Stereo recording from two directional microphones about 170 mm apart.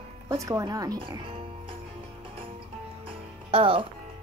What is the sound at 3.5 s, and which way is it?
Speech, 30° right (ahead or behind).